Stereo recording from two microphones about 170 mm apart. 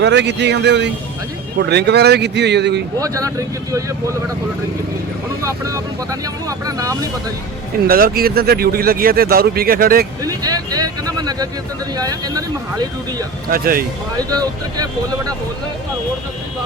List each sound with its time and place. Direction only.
0.0 s speech: 90° right
1.5 s speech: 75° right (ahead or behind)
3.0 s speech: 20° right (ahead or behind)
5.4 s speech: 20° right (ahead or behind)
7.9 s speech: 60° right (ahead or behind)
10.2 s a sound: 20° right (ahead or behind)
11.9 s speech: 20° right (ahead or behind)
13.5 s speech: 60° right (ahead or behind)
14.2 s speech: 20° right (ahead or behind)